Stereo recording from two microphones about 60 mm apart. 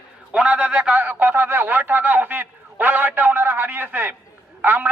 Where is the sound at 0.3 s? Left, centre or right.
Right.